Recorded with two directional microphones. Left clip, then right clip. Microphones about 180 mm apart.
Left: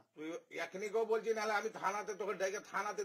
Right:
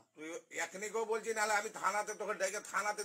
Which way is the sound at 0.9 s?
30° left (ahead or behind).